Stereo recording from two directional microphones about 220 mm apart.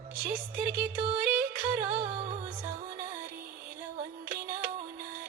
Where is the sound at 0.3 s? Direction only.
45° right (ahead or behind).